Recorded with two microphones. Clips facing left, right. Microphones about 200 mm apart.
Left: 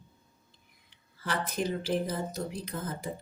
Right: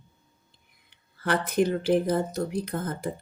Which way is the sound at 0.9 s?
60° right (ahead or behind).